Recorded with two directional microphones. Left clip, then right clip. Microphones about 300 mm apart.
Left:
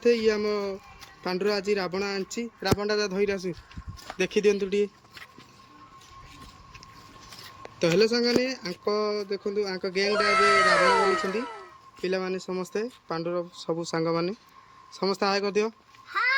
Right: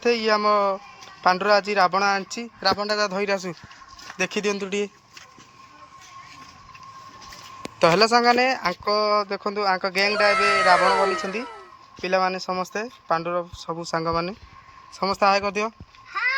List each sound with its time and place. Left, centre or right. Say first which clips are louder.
0.0 s speech: right 3 dB; centre
7.8 s speech: right 6 dB; centre